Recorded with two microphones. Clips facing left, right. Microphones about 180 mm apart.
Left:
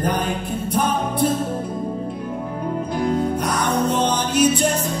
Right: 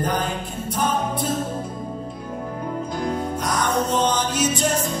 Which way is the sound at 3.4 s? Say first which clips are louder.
Left 2 dB; 60° left (ahead or behind).